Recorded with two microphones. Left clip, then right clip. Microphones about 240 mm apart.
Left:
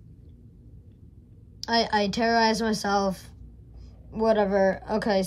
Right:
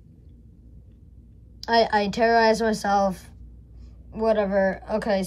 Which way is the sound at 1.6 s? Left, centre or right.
Centre.